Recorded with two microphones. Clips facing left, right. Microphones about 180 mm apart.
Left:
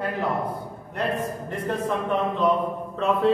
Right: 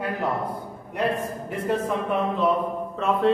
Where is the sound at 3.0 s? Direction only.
Centre (ahead or behind).